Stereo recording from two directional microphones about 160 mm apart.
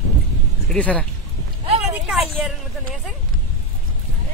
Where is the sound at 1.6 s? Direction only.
40° right (ahead or behind).